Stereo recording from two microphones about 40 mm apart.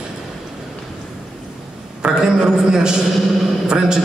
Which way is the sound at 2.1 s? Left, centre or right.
Centre.